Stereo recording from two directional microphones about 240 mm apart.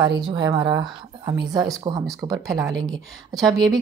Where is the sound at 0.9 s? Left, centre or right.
Centre.